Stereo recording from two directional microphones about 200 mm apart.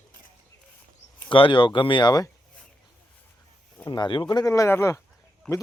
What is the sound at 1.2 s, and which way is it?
Speech, 25° left (ahead or behind).